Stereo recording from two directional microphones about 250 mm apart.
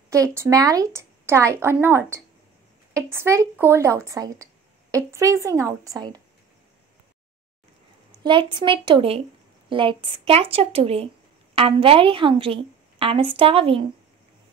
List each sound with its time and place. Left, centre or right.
0.1 s a woman's voice: centre
8.2 s a woman's voice: centre